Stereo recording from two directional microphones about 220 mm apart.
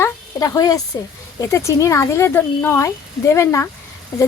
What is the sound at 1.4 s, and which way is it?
Speech, 15° left (ahead or behind).